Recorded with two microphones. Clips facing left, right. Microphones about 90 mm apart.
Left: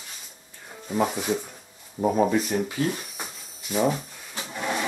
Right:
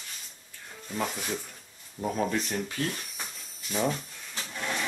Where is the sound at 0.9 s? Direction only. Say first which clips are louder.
Left 8 dB; 10° left (ahead or behind).